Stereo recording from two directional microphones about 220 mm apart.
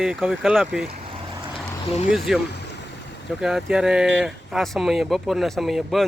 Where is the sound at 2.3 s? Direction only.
Centre (ahead or behind).